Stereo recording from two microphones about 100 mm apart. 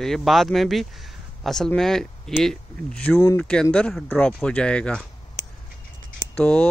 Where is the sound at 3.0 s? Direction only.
15° left (ahead or behind).